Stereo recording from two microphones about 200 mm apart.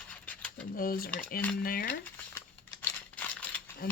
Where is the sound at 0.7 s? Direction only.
45° left (ahead or behind).